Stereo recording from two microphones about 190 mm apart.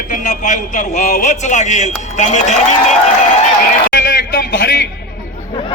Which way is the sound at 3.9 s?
50° left (ahead or behind).